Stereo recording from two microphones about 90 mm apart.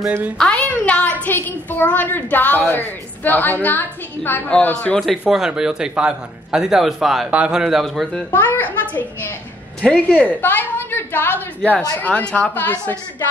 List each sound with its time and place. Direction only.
0.4 s a woman's voice: 10° left (ahead or behind)
5.2 s a man's voice: 10° right (ahead or behind)
8.3 s a woman's voice: 20° left (ahead or behind)